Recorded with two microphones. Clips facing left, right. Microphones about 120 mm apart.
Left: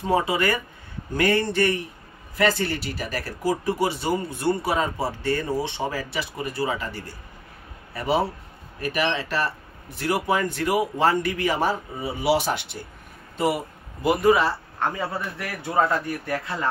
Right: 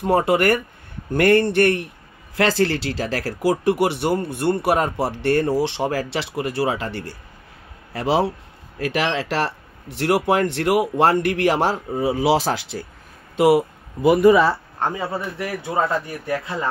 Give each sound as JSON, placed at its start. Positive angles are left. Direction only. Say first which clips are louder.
{"t": 0.0, "sound": "a man's voice", "louder": "right 5 dB", "side_deg": -60}
{"t": 2.3, "sound": "speech", "louder": "right 4 dB", "side_deg": -90}
{"t": 7.9, "sound": "speech", "louder": "right 4 dB", "side_deg": -90}
{"t": 13.4, "sound": "speech", "louder": "right 8 dB", "side_deg": -75}
{"t": 15.0, "sound": "speech", "louder": "right 3 dB", "side_deg": -20}